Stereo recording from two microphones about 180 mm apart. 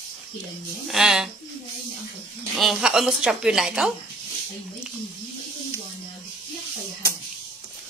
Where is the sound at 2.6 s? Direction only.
Centre (ahead or behind).